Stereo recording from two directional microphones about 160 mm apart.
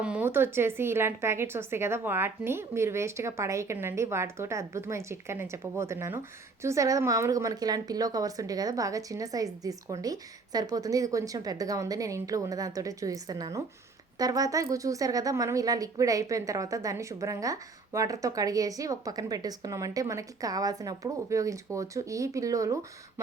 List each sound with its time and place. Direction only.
0.0 s a woman's voice: 10° right (ahead or behind)